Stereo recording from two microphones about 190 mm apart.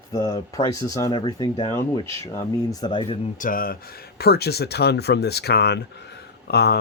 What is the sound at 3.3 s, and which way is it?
Speech, 45° left (ahead or behind).